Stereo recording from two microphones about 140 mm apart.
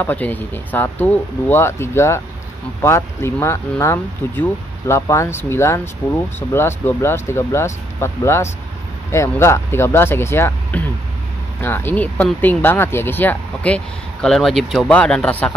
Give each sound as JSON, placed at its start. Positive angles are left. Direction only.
{"t": 0.0, "sound": "speech", "side_deg": 10}